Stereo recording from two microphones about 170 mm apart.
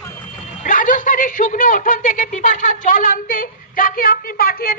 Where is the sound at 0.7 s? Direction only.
50° left (ahead or behind).